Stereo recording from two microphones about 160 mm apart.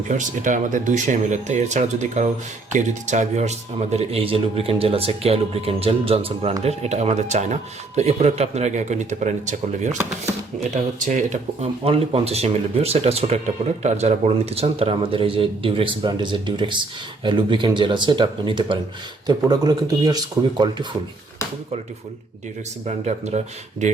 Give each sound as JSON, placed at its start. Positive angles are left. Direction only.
{"t": 0.1, "sound": "speech", "side_deg": -50}
{"t": 22.9, "sound": "speech", "side_deg": -45}